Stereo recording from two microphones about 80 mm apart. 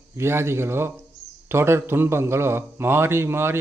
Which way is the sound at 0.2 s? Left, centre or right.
Right.